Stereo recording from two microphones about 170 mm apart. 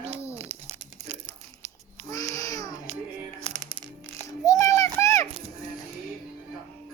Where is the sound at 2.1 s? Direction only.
20° left (ahead or behind).